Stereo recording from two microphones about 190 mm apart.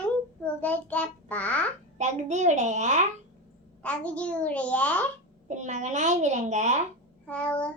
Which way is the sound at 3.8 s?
5° left (ahead or behind).